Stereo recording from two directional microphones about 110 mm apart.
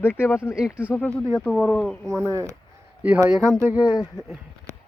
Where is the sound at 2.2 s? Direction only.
25° right (ahead or behind).